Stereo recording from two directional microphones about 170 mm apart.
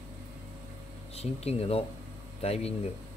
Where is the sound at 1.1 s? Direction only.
35° left (ahead or behind).